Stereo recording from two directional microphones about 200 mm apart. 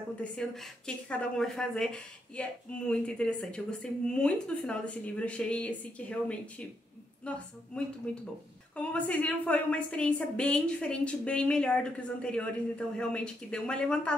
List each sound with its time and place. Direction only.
0.2 s a woman's voice: 5° left (ahead or behind)